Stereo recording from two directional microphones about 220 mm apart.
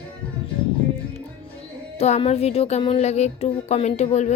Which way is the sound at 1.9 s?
30° left (ahead or behind).